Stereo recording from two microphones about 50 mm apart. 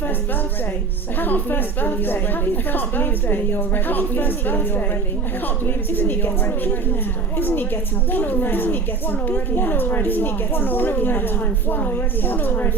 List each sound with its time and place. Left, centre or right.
1.2 s a woman's voice: left